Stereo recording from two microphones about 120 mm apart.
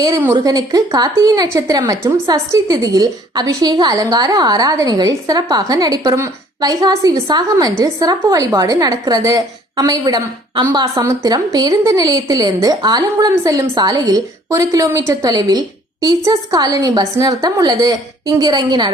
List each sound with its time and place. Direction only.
0.3 s a woman's voice: 30° right (ahead or behind)